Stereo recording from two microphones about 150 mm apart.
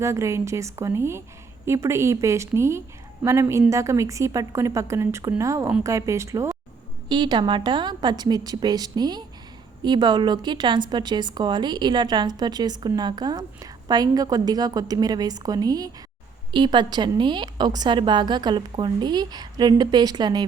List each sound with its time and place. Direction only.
0.0 s a woman's voice: 20° right (ahead or behind)